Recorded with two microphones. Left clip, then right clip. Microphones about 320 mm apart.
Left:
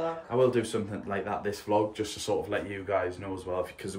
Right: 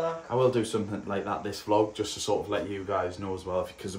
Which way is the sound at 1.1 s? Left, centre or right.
Centre.